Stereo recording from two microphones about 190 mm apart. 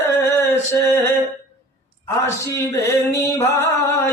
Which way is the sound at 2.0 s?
15° left (ahead or behind).